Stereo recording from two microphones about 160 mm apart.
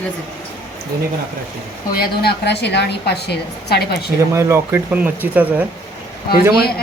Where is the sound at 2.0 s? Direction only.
85° left.